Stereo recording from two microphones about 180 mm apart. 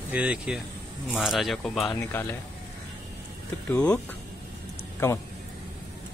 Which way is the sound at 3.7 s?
5° left (ahead or behind).